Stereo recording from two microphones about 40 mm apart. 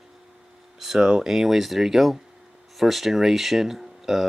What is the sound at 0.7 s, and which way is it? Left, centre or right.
Speech, centre.